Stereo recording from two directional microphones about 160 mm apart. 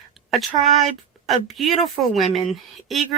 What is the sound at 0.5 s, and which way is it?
Speech, 45° right (ahead or behind).